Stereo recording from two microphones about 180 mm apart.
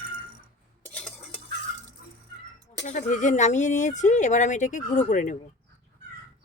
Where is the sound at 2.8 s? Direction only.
40° left (ahead or behind).